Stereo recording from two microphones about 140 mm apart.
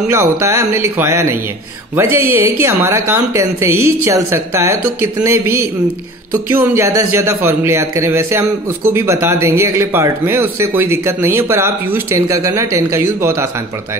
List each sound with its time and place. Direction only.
0.1 s a man's voice: 20° right (ahead or behind)